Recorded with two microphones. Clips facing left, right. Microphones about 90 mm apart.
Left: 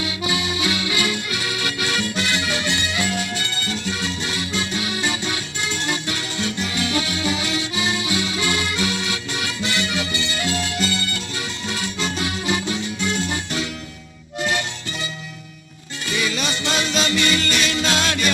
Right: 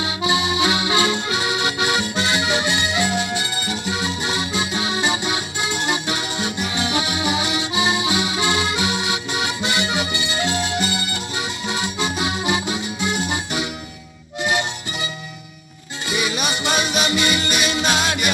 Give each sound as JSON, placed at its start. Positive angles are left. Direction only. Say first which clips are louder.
{"t": 0.0, "sound": "accordion", "louder": "right 3 dB", "side_deg": -25}
{"t": 16.0, "sound": "music", "louder": "right 1 dB", "side_deg": -20}